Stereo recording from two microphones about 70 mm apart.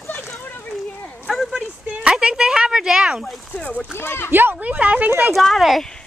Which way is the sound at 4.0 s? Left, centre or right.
Left.